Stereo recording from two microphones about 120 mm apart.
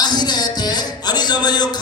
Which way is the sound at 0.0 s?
35° left (ahead or behind).